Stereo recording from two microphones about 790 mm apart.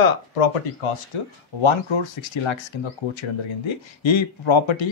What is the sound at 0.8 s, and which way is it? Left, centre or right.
Speech, left.